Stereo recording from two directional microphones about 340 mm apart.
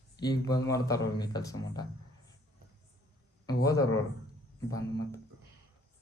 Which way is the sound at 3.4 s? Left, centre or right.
Centre.